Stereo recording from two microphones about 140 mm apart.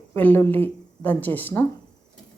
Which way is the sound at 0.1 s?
15° left (ahead or behind).